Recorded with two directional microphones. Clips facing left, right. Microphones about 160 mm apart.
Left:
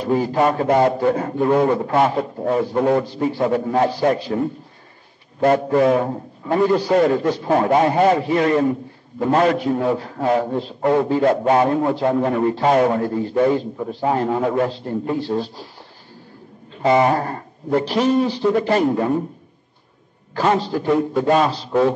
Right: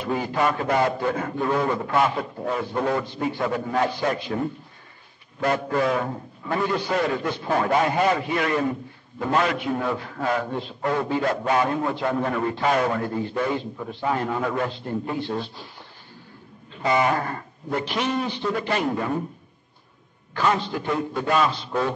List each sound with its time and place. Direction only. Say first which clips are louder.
0.0 s a man's voice: left 6 dB; 35° left (ahead or behind)
5.4 s a man's voice: left 7 dB; 35° left (ahead or behind)
10.8 s a man's voice: left 7 dB; 25° left (ahead or behind)
16.7 s a man's voice: left 6 dB; 35° left (ahead or behind)
20.3 s a man's voice: left 5 dB; 35° left (ahead or behind)